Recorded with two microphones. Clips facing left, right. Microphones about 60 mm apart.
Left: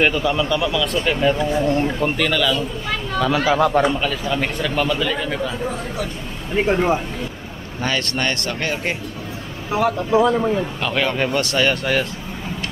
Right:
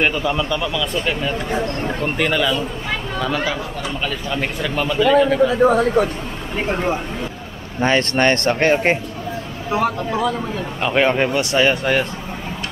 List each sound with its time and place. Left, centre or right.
0.0 s speech: centre
2.1 s speech: centre
3.2 s speech: centre
3.5 s a man's voice: left
4.0 s speech: centre
6.0 s speech: right
6.5 s speech: centre
7.8 s speech: right
10.1 s speech: centre
10.8 s a man's voice: right